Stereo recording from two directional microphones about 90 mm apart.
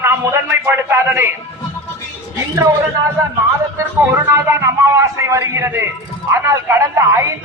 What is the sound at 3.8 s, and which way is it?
A man's voice, 25° right (ahead or behind).